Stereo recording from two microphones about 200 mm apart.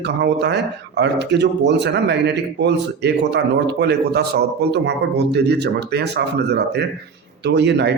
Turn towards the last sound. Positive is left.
turn(degrees=-60)  # may be behind; listen again after turning